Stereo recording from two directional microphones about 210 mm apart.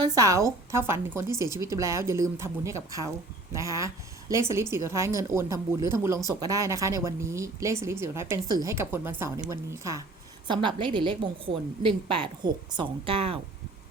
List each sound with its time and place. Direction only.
0.0 s a woman's voice: 15° right (ahead or behind)